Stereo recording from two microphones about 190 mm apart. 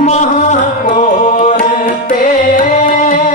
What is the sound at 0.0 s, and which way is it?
Music, 40° left (ahead or behind).